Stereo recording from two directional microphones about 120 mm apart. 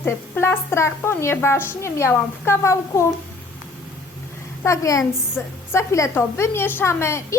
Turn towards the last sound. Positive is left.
turn(degrees=25)  # may be behind; listen again after turning